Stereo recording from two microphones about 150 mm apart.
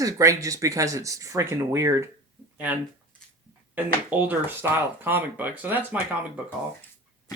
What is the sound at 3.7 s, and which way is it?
Speech, 10° right (ahead or behind).